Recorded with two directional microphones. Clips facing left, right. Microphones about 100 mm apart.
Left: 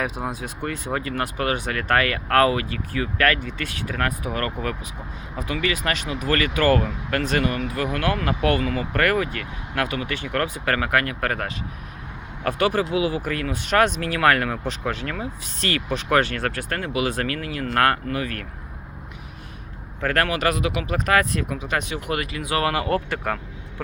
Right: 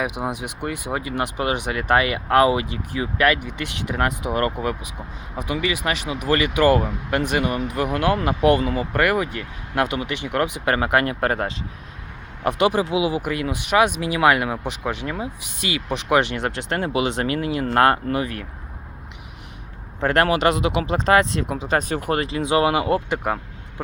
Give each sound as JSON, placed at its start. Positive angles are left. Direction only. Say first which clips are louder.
{"t": 0.0, "sound": "speech", "louder": "right 2 dB", "side_deg": -15}
{"t": 20.0, "sound": "speech", "louder": "right 4 dB", "side_deg": -25}